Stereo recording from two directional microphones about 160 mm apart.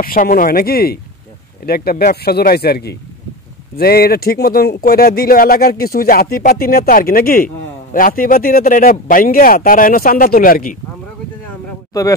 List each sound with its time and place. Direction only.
0.0 s speech: 65° left (ahead or behind); by 3.0 s 85° left
3.7 s speech: 70° left (ahead or behind)